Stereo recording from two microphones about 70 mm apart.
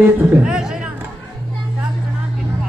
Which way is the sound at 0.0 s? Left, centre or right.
Right.